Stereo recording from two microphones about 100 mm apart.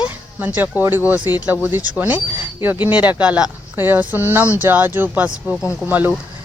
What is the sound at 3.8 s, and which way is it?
Speech, 20° right (ahead or behind).